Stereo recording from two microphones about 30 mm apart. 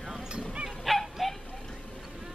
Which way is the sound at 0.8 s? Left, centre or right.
Centre.